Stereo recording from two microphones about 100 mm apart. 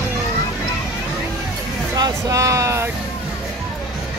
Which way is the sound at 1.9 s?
35° right (ahead or behind).